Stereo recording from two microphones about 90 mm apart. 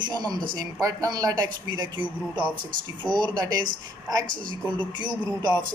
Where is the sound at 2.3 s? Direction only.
60° right (ahead or behind).